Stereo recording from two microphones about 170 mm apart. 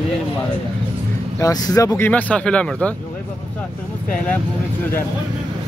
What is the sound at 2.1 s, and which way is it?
Speech, 10° left (ahead or behind).